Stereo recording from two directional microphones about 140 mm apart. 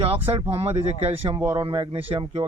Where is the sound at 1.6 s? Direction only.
40° right (ahead or behind).